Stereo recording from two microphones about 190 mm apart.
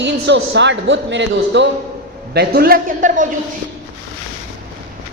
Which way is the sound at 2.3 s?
55° right (ahead or behind).